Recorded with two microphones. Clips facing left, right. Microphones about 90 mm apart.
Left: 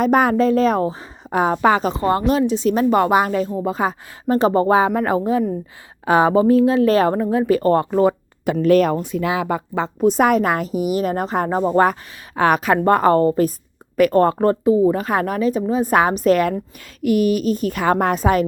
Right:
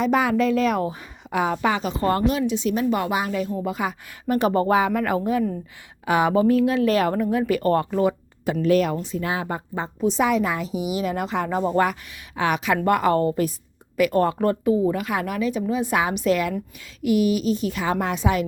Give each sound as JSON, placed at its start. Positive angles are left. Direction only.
{"t": 0.0, "sound": "speech", "side_deg": 50}
{"t": 2.0, "sound": "speech", "side_deg": 25}
{"t": 2.5, "sound": "speech", "side_deg": 40}
{"t": 3.5, "sound": "speech", "side_deg": 30}
{"t": 8.6, "sound": "a woman's voice", "side_deg": 45}
{"t": 9.1, "sound": "speech", "side_deg": 90}
{"t": 10.0, "sound": "a woman's voice", "side_deg": 50}
{"t": 14.6, "sound": "a woman's voice", "side_deg": 25}